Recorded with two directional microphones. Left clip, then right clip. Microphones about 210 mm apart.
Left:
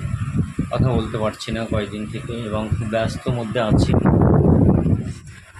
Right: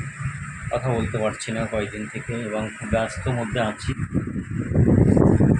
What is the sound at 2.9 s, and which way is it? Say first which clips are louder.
Speech: left 2 dB; 15° left (ahead or behind).